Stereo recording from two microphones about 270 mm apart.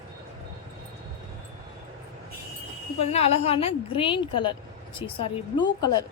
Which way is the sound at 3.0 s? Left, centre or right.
Left.